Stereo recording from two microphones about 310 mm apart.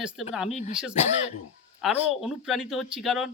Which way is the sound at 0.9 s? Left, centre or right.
Left.